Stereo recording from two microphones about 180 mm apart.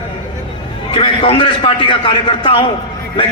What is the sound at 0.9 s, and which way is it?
A man's voice, 30° left (ahead or behind).